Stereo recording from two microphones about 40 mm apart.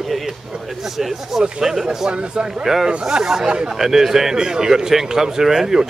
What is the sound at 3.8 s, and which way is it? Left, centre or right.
Speech, centre.